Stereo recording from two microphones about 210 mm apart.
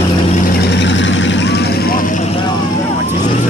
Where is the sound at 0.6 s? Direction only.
55° left (ahead or behind); by 2.2 s 40° left (ahead or behind).